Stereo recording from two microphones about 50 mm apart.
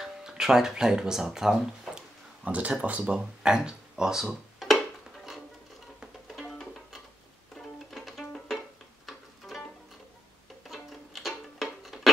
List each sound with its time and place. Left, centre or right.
0.0 s speech: centre
2.4 s speech: right
3.4 s a sound: centre
6.4 s music: centre
10.7 s music: centre